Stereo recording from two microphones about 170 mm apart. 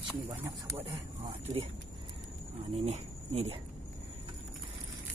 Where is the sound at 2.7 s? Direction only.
40° right (ahead or behind).